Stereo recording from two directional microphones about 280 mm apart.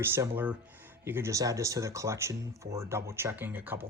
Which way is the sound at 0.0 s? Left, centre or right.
Centre.